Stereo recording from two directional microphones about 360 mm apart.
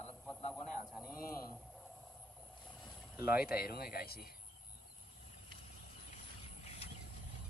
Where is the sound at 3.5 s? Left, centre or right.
Left.